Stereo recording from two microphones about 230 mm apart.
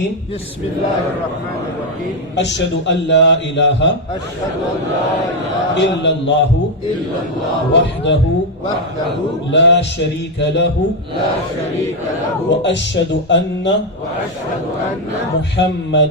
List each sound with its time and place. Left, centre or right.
2.3 s a man's voice: left
5.7 s a man's voice: left
7.7 s a man's voice: left
9.5 s a man's voice: left
12.5 s a man's voice: left
15.5 s a man's voice: left